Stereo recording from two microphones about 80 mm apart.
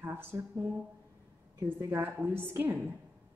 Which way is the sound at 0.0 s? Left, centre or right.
Right.